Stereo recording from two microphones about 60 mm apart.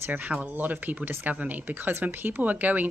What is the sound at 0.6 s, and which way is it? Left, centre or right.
Speech, right.